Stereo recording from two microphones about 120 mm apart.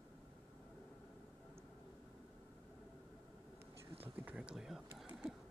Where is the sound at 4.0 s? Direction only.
10° right (ahead or behind).